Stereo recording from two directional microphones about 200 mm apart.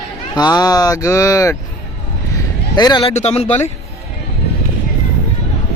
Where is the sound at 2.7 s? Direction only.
20° left (ahead or behind).